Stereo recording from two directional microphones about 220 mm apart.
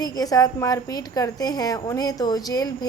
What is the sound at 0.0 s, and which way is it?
A woman's voice, 15° left (ahead or behind).